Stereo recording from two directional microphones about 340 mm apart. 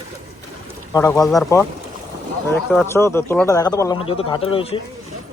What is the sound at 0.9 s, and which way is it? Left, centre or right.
Speech, centre.